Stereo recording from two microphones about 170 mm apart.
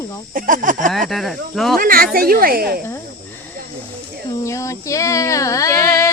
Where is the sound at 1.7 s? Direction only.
55° right (ahead or behind).